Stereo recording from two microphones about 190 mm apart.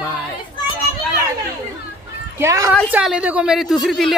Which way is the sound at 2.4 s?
15° right (ahead or behind).